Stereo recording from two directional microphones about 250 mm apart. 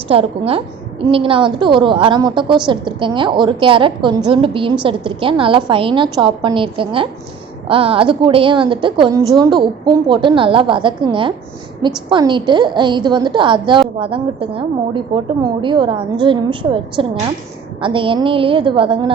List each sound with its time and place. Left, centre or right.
0.1 s a woman's voice: right